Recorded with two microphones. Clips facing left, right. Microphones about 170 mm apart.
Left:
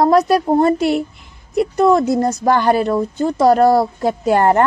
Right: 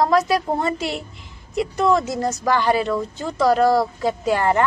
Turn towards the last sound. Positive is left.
turn(degrees=50)  # may be behind; listen again after turning